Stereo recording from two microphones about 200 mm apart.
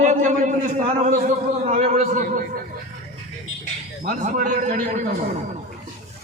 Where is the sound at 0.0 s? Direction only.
35° right (ahead or behind).